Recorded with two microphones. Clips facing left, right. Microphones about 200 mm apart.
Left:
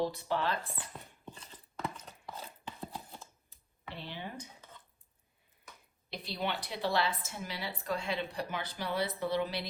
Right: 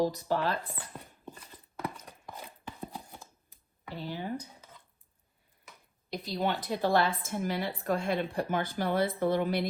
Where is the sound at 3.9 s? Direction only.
40° right (ahead or behind).